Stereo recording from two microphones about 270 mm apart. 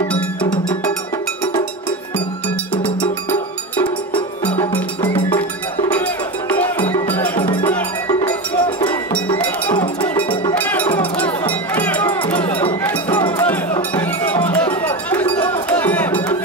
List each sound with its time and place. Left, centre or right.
0.1 s music: centre
3.3 s music: centre
4.7 s cowbell: centre
5.9 s music: centre
10.0 s music: centre
12.3 s run: centre
12.8 s cowbell: centre